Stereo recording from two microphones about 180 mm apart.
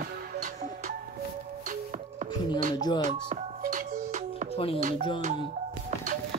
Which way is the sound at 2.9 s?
40° right (ahead or behind).